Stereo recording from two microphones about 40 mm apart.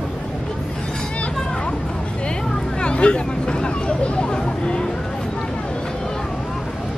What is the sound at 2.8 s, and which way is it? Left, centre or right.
Hubbub, left.